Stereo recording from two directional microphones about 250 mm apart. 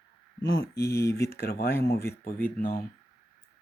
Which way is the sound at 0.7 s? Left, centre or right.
Centre.